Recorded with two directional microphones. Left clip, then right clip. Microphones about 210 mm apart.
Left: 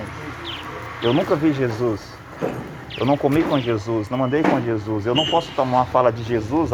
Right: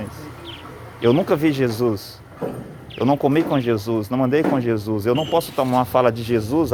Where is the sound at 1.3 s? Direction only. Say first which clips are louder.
Right 1 dB; 60° right (ahead or behind).